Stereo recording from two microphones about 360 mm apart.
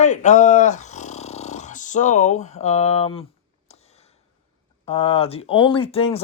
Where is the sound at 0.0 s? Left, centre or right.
Centre.